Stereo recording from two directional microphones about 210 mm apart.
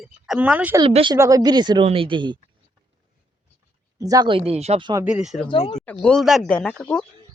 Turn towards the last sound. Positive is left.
turn(degrees=5)  # may be behind; listen again after turning